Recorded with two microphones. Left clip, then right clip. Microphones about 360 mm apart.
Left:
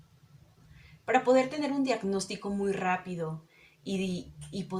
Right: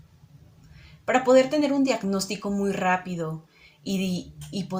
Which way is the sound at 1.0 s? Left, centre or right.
Left.